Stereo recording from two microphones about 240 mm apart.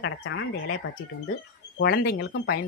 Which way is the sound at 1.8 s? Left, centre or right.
Left.